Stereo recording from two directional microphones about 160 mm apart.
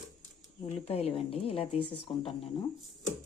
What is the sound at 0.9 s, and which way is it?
A woman's voice, 40° left (ahead or behind).